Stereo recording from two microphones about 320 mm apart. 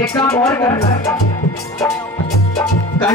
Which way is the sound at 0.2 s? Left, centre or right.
Centre.